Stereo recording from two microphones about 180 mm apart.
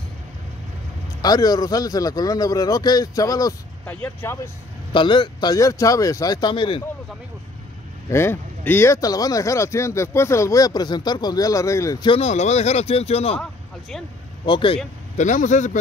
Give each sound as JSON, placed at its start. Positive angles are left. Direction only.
{"t": 1.2, "sound": "a man's voice", "side_deg": 20}
{"t": 4.9, "sound": "a man's voice", "side_deg": 25}
{"t": 8.1, "sound": "speech", "side_deg": 15}
{"t": 12.2, "sound": "speech", "side_deg": 40}
{"t": 13.4, "sound": "a sound", "side_deg": 0}
{"t": 14.4, "sound": "a man's voice", "side_deg": 25}
{"t": 15.1, "sound": "a man's voice", "side_deg": 45}